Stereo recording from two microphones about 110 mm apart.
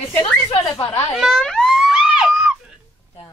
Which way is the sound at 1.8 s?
5° right (ahead or behind).